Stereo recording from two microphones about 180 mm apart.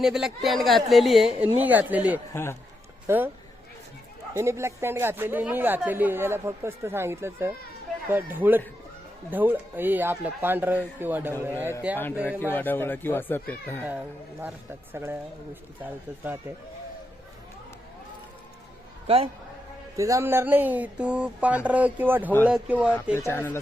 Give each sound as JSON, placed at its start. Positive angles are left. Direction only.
{"t": 0.0, "sound": "a woman's voice", "side_deg": 0}
{"t": 2.3, "sound": "speech", "side_deg": 15}
{"t": 3.1, "sound": "a woman's voice", "side_deg": -15}
{"t": 4.4, "sound": "a woman's voice", "side_deg": -15}
{"t": 12.4, "sound": "speech", "side_deg": 10}
{"t": 13.8, "sound": "a woman's voice", "side_deg": -10}
{"t": 19.0, "sound": "a man's voice", "side_deg": -30}
{"t": 20.0, "sound": "a woman's voice", "side_deg": -15}
{"t": 23.1, "sound": "speech", "side_deg": 10}